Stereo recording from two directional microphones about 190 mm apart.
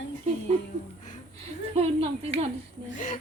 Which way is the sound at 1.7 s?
30° right (ahead or behind).